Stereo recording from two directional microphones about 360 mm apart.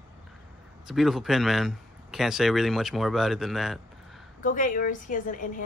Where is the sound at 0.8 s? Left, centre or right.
Centre.